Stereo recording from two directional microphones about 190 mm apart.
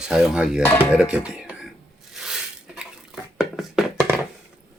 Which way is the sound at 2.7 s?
5° right (ahead or behind).